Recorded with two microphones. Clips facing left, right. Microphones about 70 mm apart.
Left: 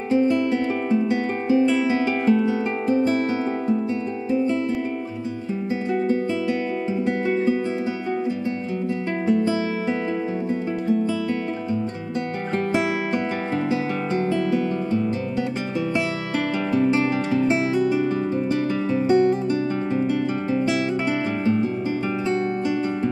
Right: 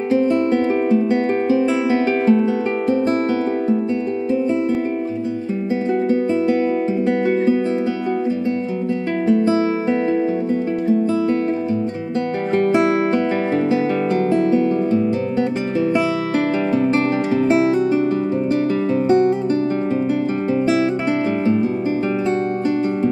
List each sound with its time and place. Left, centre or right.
0.2 s music: right
1.9 s music: right
16.8 s music: right